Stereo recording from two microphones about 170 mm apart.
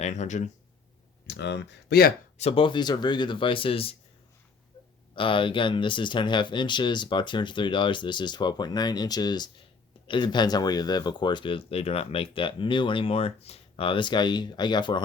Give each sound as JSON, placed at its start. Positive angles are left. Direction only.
{"t": 0.0, "sound": "speech", "side_deg": 45}
{"t": 1.3, "sound": "speech", "side_deg": 90}
{"t": 2.4, "sound": "speech", "side_deg": 35}
{"t": 5.1, "sound": "speech", "side_deg": 30}